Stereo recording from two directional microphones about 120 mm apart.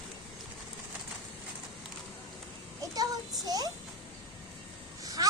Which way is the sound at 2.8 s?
30° right (ahead or behind).